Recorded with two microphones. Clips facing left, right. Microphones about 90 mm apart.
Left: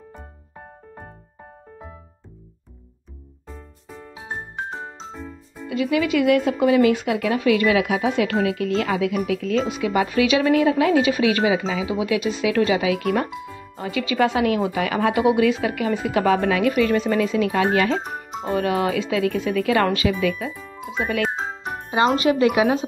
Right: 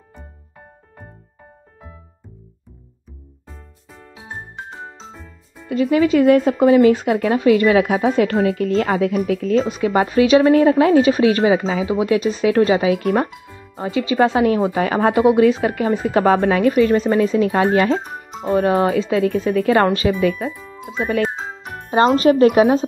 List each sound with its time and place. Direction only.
5.7 s speech: 35° right (ahead or behind)
20.6 s music: centre (ahead or behind)
21.9 s speech: 40° right (ahead or behind)